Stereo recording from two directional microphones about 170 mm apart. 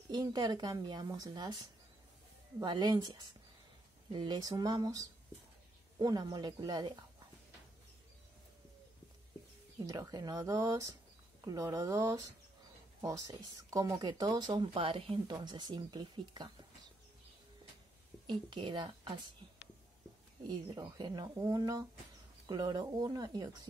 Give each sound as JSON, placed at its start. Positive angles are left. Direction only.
{"t": 0.1, "sound": "speech", "side_deg": -25}
{"t": 9.8, "sound": "speech", "side_deg": -20}
{"t": 18.2, "sound": "speech", "side_deg": -25}
{"t": 20.4, "sound": "speech", "side_deg": -25}